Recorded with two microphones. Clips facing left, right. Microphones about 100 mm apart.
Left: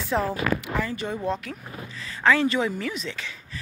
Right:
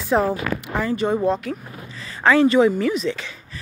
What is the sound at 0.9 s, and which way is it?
Speech, 60° right (ahead or behind).